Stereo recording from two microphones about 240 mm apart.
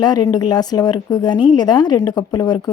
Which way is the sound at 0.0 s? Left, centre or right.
Centre.